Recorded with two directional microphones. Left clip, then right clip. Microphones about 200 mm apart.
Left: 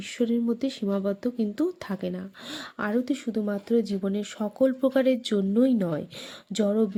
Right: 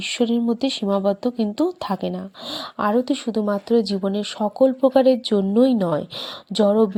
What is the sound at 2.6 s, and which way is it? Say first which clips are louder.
A woman's voice: right 8 dB; centre (ahead or behind).